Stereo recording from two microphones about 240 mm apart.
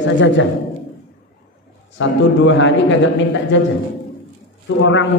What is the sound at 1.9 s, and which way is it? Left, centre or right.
A man's voice, left.